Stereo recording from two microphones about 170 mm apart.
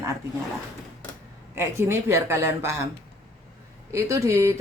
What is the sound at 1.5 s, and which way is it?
Speech, 15° right (ahead or behind).